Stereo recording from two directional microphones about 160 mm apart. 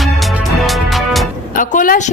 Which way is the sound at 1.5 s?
55° left (ahead or behind).